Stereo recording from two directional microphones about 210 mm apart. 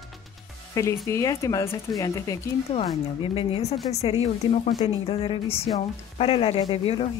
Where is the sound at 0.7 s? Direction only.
15° left (ahead or behind).